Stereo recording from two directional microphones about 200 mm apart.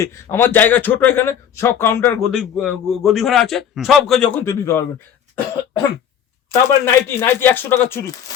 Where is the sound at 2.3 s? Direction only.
Centre (ahead or behind).